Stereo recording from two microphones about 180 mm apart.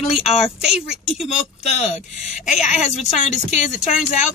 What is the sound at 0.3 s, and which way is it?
Speech, centre (ahead or behind).